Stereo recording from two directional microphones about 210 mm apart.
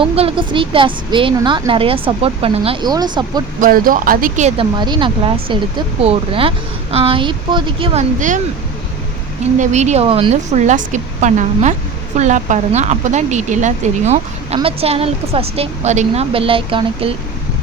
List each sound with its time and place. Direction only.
0.0 s a woman's voice: 25° right (ahead or behind)
3.6 s speech: 40° right (ahead or behind)
4.8 s a woman's voice: 20° right (ahead or behind)
9.6 s speech: 35° right (ahead or behind)